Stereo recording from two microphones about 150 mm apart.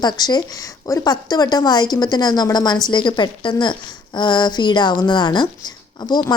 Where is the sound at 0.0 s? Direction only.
30° left (ahead or behind).